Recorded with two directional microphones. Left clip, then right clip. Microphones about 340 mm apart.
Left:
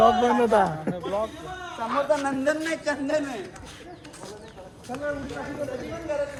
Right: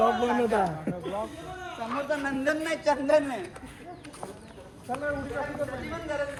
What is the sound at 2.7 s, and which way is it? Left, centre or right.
Speech, centre.